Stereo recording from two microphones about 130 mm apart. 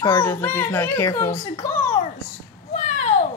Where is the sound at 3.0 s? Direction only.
60° left (ahead or behind).